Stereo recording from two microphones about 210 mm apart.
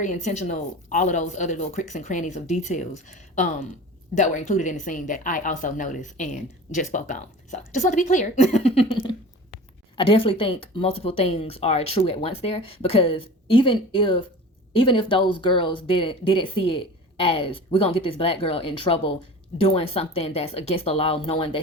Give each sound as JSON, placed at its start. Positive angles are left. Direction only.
{"t": 0.0, "sound": "speech", "side_deg": 35}